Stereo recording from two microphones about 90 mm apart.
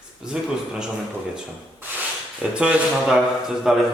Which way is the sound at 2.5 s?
10° right (ahead or behind).